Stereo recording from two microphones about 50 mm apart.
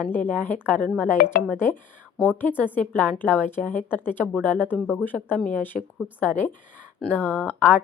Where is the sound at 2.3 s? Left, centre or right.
Left.